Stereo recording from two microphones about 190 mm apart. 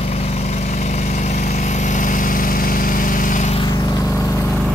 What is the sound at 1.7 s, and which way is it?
Vehicle, 40° left (ahead or behind).